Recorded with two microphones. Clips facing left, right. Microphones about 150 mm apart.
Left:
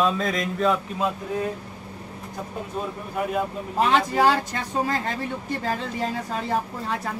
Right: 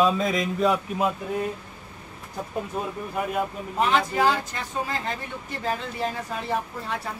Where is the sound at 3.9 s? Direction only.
35° left (ahead or behind).